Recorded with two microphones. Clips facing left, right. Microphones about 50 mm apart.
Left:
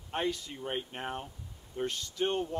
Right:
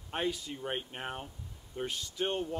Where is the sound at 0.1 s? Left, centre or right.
Centre.